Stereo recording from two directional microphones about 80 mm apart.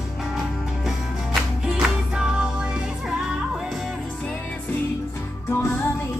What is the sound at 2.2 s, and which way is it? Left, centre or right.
Music, centre.